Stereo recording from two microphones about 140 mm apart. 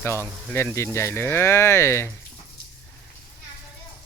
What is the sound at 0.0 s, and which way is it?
Speech, 20° left (ahead or behind).